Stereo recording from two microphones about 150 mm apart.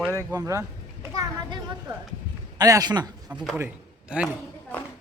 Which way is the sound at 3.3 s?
10° right (ahead or behind).